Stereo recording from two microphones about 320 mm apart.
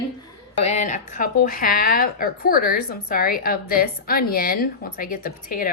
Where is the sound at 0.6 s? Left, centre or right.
Left.